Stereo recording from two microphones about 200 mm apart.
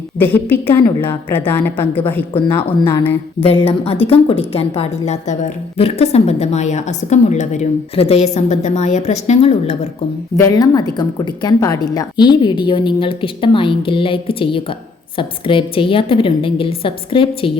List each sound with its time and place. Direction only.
0.2 s a woman's voice: 10° left (ahead or behind)
3.4 s a woman's voice: 30° left (ahead or behind)
10.3 s a woman's voice: 15° left (ahead or behind)